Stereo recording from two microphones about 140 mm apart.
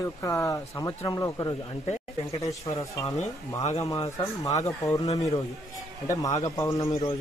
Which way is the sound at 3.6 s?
55° left (ahead or behind).